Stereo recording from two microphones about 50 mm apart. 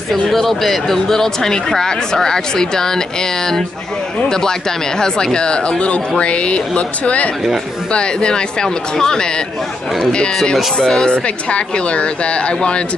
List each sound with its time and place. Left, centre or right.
0.1 s speech: centre; by 12.5 s left